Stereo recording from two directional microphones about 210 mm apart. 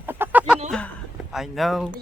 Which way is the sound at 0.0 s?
10° right (ahead or behind).